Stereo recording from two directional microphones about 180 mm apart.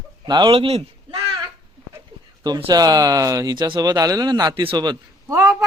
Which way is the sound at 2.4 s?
25° right (ahead or behind).